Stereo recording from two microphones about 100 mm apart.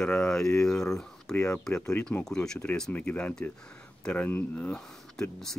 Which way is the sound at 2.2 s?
5° left (ahead or behind).